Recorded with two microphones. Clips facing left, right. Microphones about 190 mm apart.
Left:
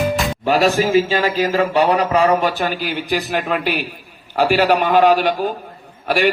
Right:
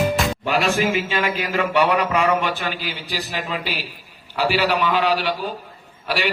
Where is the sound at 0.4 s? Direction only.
40° left (ahead or behind).